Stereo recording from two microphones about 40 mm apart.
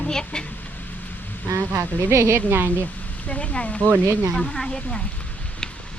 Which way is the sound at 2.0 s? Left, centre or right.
Right.